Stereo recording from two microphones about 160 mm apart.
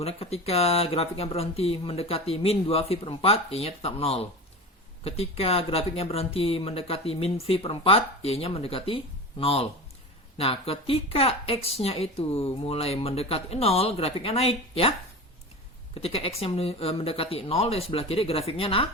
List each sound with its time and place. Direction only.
0.0 s speech: 40° left (ahead or behind)
16.0 s speech: 35° left (ahead or behind)